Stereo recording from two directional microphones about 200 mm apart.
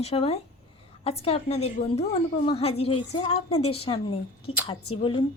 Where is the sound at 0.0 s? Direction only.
30° left (ahead or behind).